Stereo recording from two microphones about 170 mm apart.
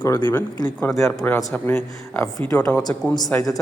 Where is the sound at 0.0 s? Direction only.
25° left (ahead or behind).